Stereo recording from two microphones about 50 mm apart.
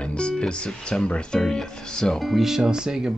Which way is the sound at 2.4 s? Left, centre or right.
Centre.